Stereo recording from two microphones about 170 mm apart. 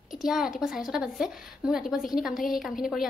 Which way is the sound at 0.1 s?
Centre (ahead or behind).